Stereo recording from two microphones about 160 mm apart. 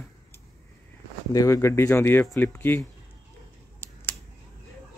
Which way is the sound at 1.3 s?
20° left (ahead or behind).